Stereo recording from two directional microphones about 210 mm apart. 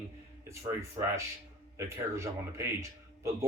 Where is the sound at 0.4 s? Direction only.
15° right (ahead or behind).